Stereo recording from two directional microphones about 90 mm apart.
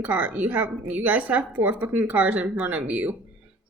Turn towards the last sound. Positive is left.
turn(degrees=-15)  # may be behind; listen again after turning